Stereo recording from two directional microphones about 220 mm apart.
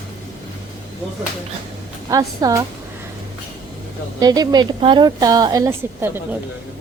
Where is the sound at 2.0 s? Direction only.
15° right (ahead or behind).